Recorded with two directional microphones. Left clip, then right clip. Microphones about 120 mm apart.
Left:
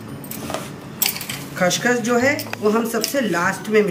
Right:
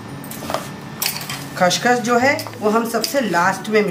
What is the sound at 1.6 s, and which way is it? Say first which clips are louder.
Speech: right 3 dB; centre (ahead or behind).